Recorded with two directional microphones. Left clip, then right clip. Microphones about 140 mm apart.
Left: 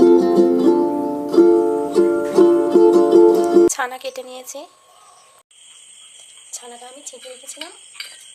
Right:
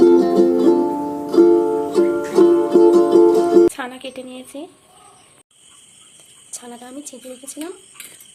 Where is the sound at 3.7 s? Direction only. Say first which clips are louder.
Left 5 dB; 10° left (ahead or behind).